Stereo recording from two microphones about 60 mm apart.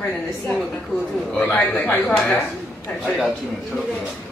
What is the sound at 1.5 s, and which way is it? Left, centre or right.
Speech, left.